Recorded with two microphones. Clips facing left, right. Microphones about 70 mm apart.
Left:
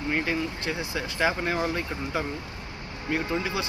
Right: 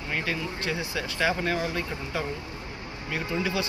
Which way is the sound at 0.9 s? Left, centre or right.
Left.